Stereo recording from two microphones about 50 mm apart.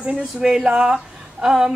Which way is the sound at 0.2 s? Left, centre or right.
Centre.